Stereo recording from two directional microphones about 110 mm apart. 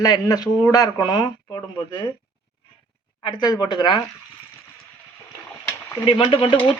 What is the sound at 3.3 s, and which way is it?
Speech, 40° left (ahead or behind).